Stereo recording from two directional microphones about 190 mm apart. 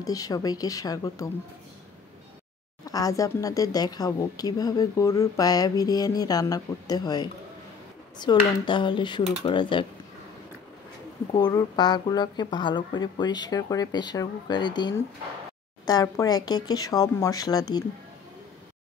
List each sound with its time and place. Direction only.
0.0 s speech: 20° left (ahead or behind)
2.8 s speech: 20° left (ahead or behind)
11.3 s speech: 20° left (ahead or behind)